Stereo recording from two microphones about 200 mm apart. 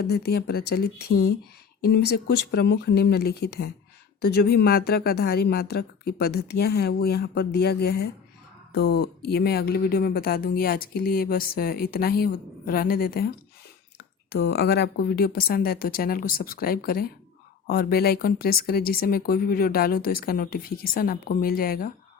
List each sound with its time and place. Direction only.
0.0 s speech: 50° left (ahead or behind)
14.3 s speech: 55° left (ahead or behind)